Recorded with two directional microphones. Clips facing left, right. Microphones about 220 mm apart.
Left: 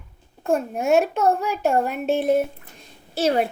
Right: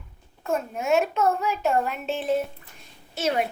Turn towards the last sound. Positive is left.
turn(degrees=35)  # may be behind; listen again after turning